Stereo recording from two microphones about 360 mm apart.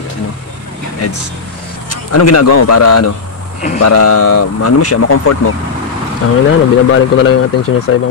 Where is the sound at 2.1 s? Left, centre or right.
Left.